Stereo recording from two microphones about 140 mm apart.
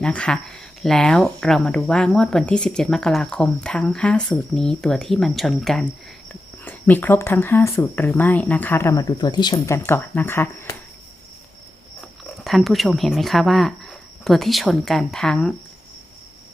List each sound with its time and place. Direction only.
0.0 s speech: 5° left (ahead or behind)
6.7 s speech: 15° left (ahead or behind); by 9.7 s 30° left (ahead or behind)
9.7 s speech: 15° left (ahead or behind)
12.5 s speech: centre (ahead or behind)